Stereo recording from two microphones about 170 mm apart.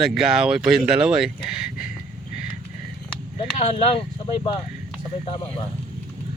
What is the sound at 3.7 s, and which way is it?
Speech, 35° left (ahead or behind).